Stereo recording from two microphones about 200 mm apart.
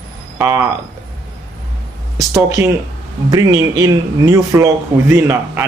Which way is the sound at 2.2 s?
15° right (ahead or behind).